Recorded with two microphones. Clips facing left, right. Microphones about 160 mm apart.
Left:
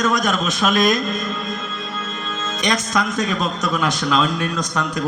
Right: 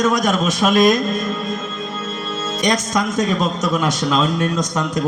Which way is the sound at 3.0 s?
25° right (ahead or behind).